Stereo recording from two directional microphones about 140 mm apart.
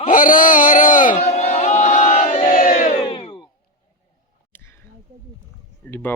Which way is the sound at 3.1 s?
40° left (ahead or behind).